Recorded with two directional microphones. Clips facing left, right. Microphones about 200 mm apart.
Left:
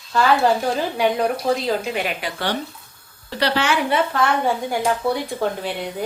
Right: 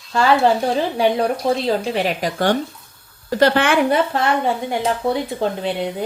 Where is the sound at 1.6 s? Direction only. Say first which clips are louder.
Right 3 dB; 35° right (ahead or behind); by 3.9 s 55° right (ahead or behind).